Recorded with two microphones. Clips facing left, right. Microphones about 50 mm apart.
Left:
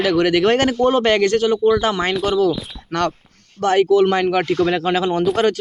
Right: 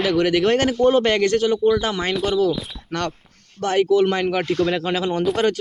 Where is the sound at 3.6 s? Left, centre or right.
Left.